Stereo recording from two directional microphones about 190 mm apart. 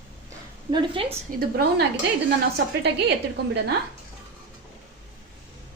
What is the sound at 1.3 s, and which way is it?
Speech, 50° right (ahead or behind).